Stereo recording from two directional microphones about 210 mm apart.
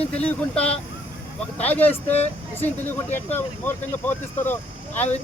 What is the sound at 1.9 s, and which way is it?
Speech, 30° left (ahead or behind).